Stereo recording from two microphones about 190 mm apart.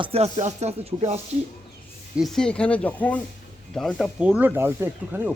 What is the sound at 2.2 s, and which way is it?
Speech, centre (ahead or behind).